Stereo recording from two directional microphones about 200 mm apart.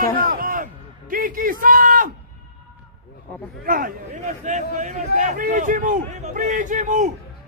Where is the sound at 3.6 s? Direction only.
45° right (ahead or behind).